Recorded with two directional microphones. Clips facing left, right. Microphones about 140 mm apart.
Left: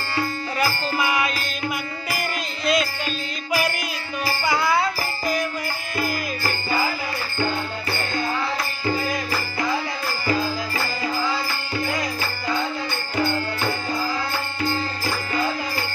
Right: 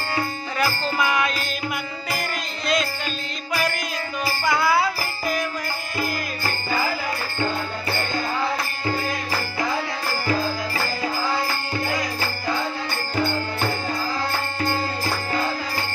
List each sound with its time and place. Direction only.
0.6 s music: 5° left (ahead or behind)
4.5 s jingle bell: 5° right (ahead or behind)